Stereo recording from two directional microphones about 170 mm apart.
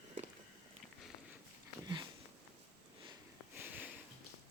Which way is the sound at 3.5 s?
10° right (ahead or behind).